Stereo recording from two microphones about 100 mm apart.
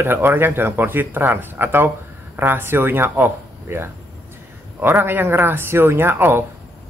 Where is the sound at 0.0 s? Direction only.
20° right (ahead or behind).